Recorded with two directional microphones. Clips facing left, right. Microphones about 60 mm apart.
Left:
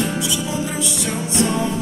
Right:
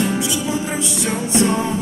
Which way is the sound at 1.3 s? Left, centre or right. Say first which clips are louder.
Right 2 dB; centre.